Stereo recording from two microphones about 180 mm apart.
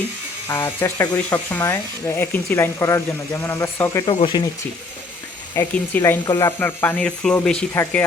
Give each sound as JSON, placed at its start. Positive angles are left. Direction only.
{"t": 0.4, "sound": "speech", "side_deg": 15}
{"t": 4.0, "sound": "speech", "side_deg": 30}
{"t": 5.5, "sound": "speech", "side_deg": 15}
{"t": 7.7, "sound": "speech", "side_deg": 15}